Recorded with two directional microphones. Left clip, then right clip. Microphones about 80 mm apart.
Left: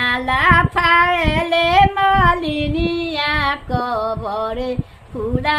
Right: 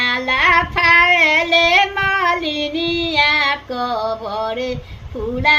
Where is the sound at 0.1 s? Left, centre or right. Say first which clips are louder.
Left 1 dB; left.